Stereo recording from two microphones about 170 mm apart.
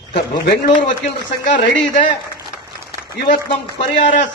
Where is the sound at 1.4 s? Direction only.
50° left (ahead or behind).